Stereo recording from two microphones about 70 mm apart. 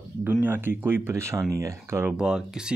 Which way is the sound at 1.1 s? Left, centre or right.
Right.